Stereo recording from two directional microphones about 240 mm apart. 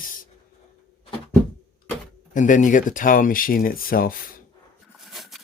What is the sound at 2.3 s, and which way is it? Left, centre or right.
Speech, left.